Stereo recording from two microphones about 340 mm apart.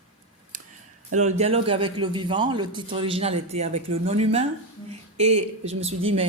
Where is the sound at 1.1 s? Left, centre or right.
Centre.